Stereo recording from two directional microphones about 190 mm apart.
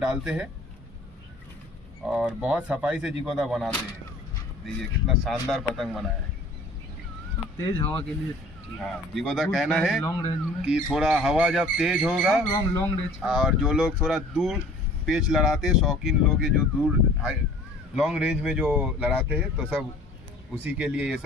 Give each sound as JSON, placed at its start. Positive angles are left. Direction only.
{"t": 0.1, "sound": "speech", "side_deg": -5}
{"t": 2.0, "sound": "speech", "side_deg": 0}
{"t": 7.6, "sound": "speech", "side_deg": 10}
{"t": 10.0, "sound": "speech", "side_deg": 20}
{"t": 10.6, "sound": "speech", "side_deg": -5}
{"t": 12.5, "sound": "speech", "side_deg": 20}
{"t": 13.2, "sound": "speech", "side_deg": -5}